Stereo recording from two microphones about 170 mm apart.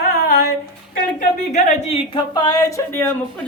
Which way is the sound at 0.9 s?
55° left (ahead or behind).